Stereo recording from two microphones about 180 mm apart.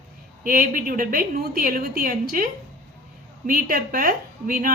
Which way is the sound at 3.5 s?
50° right (ahead or behind).